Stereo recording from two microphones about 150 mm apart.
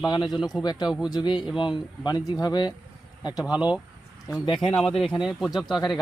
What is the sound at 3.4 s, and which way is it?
Speech, 5° right (ahead or behind).